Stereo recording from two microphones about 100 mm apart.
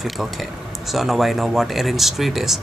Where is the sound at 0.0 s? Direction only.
Centre (ahead or behind).